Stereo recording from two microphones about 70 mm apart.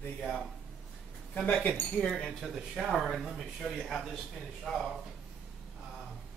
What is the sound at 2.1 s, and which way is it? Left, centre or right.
Speech, centre.